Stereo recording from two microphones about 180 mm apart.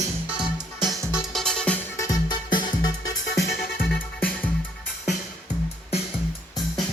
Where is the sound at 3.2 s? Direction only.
70° left (ahead or behind).